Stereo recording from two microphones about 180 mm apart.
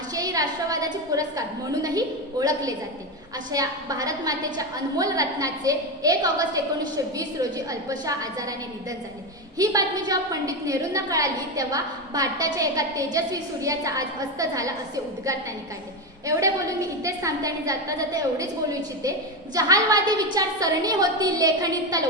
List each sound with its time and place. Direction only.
0.1 s a woman's voice: 20° right (ahead or behind)
9.6 s a woman's voice: 20° right (ahead or behind)
16.2 s a woman's voice: 20° right (ahead or behind)